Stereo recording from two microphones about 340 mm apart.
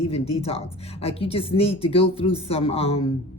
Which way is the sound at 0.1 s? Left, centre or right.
Centre.